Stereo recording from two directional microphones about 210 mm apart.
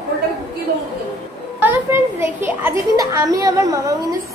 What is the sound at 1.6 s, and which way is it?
A child's voice, 10° right (ahead or behind).